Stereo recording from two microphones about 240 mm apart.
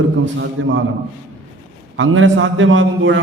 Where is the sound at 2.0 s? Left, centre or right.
Right.